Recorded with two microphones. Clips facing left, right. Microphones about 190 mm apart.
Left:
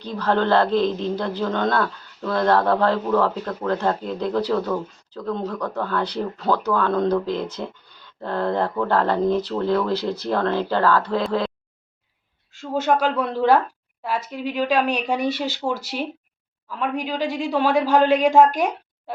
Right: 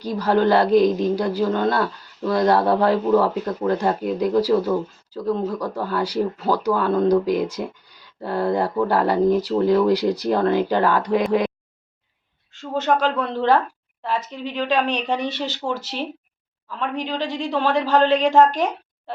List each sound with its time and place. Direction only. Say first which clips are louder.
0.0 s speech: right 3 dB; 10° right (ahead or behind)
12.5 s a woman's voice: even; 10° left (ahead or behind)